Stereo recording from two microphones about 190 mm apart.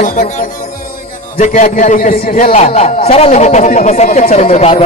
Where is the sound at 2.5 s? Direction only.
35° left (ahead or behind).